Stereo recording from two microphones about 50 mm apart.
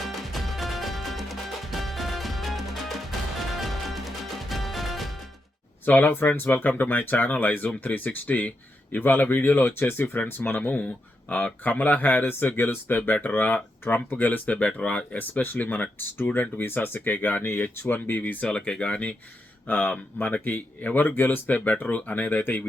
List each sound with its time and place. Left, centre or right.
0.0 s music: centre
5.8 s speech: left
10.6 s speech: left
18.4 s speech: centre; by 22.6 s left